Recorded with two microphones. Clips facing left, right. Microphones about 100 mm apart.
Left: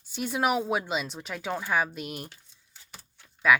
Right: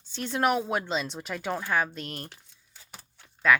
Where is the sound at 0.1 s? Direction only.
10° left (ahead or behind).